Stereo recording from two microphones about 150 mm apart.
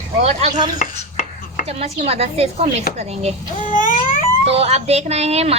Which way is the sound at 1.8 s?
45° right (ahead or behind).